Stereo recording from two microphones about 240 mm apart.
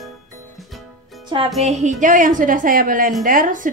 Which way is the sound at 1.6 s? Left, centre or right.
Right.